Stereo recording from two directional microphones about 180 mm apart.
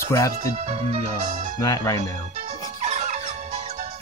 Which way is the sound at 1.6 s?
20° left (ahead or behind).